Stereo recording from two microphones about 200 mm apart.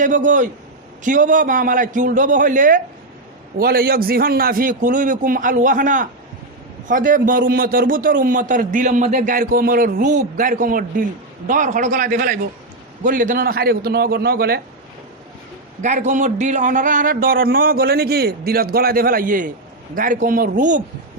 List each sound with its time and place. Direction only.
0.0 s a man's voice: 40° right (ahead or behind)
15.8 s a man's voice: 35° right (ahead or behind)